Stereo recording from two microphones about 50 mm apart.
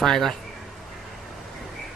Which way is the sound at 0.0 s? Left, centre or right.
Centre.